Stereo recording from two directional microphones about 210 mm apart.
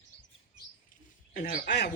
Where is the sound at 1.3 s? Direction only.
40° left (ahead or behind).